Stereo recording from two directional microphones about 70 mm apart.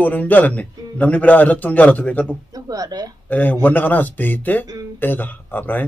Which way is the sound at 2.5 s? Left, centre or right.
Right.